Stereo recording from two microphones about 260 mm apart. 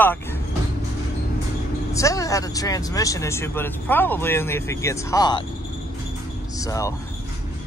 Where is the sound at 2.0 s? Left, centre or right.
Centre.